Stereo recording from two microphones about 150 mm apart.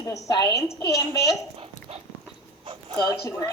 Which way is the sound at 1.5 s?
40° right (ahead or behind).